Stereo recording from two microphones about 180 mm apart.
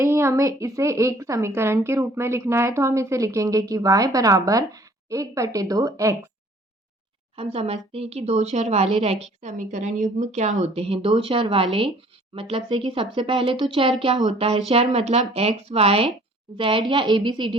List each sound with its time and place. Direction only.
0.0 s a woman's voice: 15° right (ahead or behind)
7.3 s speech: 35° right (ahead or behind)